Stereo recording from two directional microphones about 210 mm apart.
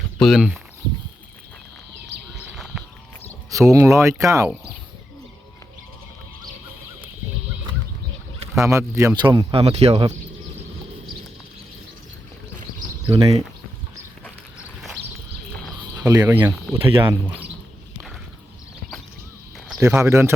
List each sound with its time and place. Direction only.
0.2 s speech: centre (ahead or behind)
2.5 s a sound: centre (ahead or behind)
3.5 s speech: 15° right (ahead or behind)
8.6 s speech: 15° right (ahead or behind); by 10.2 s 30° right (ahead or behind)
13.1 s speech: 25° right (ahead or behind)
14.6 s a sound: centre (ahead or behind)
16.0 s speech: 20° right (ahead or behind)
16.8 s speech: 25° right (ahead or behind)
17.1 s speech: 10° right (ahead or behind)
19.5 s a sound: centre (ahead or behind)
19.8 s speech: 15° right (ahead or behind)